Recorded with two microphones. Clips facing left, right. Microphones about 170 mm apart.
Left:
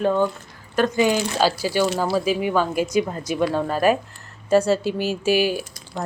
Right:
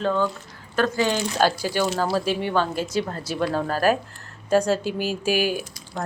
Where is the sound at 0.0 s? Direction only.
15° left (ahead or behind).